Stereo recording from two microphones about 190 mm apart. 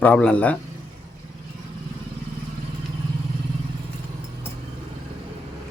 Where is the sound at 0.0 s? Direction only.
5° left (ahead or behind).